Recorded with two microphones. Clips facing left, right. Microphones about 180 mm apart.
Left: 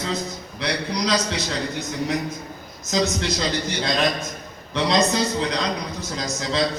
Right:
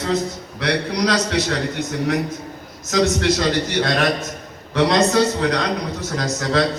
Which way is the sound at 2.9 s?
60° right (ahead or behind).